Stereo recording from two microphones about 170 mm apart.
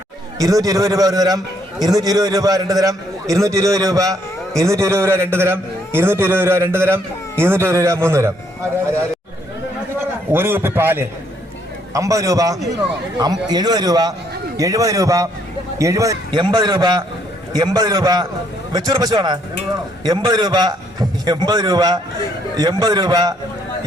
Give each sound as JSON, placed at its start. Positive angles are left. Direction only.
{"t": 0.3, "sound": "a man's voice", "side_deg": -20}
{"t": 10.3, "sound": "a man's voice", "side_deg": -15}